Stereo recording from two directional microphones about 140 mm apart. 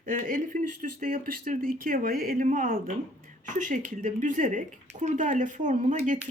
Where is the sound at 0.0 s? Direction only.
65° right (ahead or behind).